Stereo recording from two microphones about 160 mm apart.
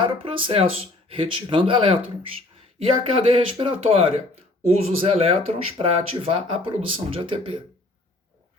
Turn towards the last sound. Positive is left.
turn(degrees=-35)  # may be behind; listen again after turning